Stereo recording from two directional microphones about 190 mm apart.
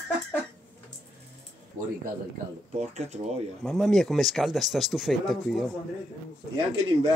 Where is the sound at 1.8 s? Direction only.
45° right (ahead or behind).